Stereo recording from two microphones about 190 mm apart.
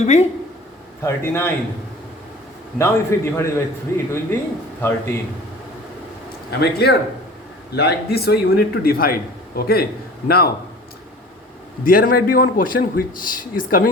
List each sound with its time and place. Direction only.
0.0 s speech: 35° left (ahead or behind)
1.0 s a man's voice: 15° left (ahead or behind)
2.7 s a man's voice: 15° left (ahead or behind)
6.5 s a man's voice: 60° left (ahead or behind)
11.9 s a man's voice: 50° left (ahead or behind)